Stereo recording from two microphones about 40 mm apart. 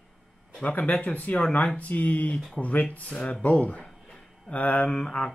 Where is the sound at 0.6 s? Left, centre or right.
Left.